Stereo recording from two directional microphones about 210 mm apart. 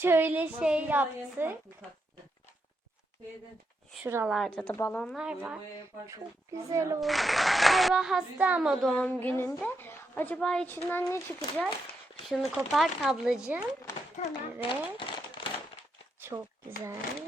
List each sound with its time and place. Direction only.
0.0 s a woman's voice: 10° right (ahead or behind)
4.0 s a woman's voice: 10° right (ahead or behind)
4.4 s a woman's voice: 5° left (ahead or behind)
6.7 s a woman's voice: 15° right (ahead or behind)
7.0 s a woman's voice: centre (ahead or behind)
12.3 s a woman's voice: centre (ahead or behind)
14.2 s a child's voice: 25° left (ahead or behind)
15.4 s a sound: 25° left (ahead or behind)
16.2 s speech: 10° right (ahead or behind)